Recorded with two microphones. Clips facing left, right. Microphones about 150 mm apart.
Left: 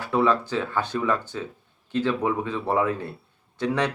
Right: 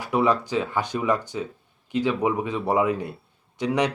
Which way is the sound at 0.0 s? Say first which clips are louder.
Even; 15° right (ahead or behind).